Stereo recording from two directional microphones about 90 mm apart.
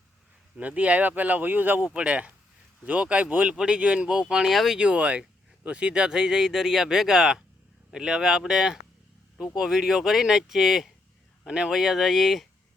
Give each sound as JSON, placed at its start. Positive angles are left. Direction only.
{"t": 0.5, "sound": "speech", "side_deg": -15}
{"t": 4.8, "sound": "speech", "side_deg": -15}